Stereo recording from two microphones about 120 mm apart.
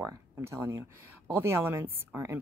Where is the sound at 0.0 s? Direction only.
20° right (ahead or behind).